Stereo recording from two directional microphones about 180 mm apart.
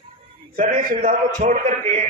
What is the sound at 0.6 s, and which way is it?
A man's voice, 50° right (ahead or behind).